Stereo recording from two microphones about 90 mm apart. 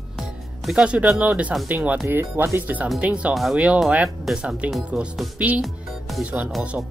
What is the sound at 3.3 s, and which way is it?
Speech, centre (ahead or behind).